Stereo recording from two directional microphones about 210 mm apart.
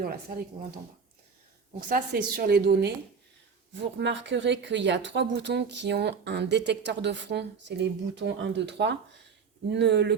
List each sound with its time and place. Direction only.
0.0 s a woman's voice: 45° right (ahead or behind)
1.9 s a woman's voice: 45° right (ahead or behind)
3.9 s speech: 60° right (ahead or behind)